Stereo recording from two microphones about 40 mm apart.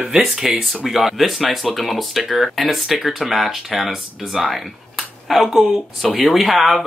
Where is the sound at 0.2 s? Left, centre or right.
Centre.